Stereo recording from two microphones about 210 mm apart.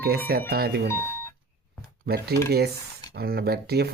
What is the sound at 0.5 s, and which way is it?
Speech, 45° right (ahead or behind).